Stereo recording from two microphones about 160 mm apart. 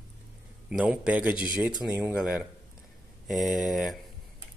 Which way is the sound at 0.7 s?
5° right (ahead or behind).